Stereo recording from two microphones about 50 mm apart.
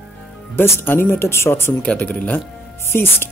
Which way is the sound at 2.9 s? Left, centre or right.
Left.